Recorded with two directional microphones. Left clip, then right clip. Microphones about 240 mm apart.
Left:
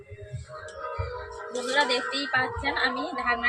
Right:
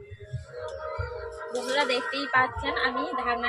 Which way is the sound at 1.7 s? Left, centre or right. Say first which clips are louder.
Left 2 dB; centre.